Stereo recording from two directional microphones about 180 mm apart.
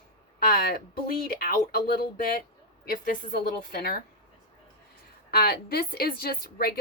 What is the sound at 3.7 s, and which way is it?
Speech, 55° left (ahead or behind).